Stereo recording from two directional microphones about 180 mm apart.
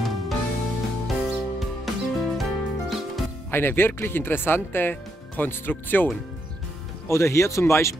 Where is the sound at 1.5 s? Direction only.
Centre (ahead or behind).